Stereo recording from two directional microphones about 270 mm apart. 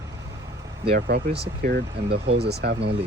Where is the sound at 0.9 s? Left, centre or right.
Right.